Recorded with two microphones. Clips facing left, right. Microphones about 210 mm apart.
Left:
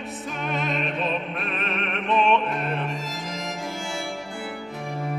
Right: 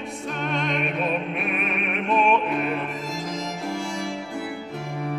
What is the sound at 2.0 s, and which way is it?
Opera, 10° right (ahead or behind).